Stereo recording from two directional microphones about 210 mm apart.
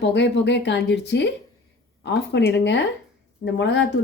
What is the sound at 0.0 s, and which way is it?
Speech, 55° left (ahead or behind).